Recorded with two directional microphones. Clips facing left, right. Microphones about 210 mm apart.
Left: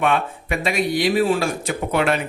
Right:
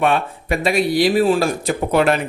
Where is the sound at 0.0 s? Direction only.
35° right (ahead or behind).